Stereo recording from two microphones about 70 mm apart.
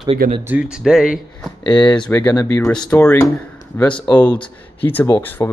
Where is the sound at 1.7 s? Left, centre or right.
Left.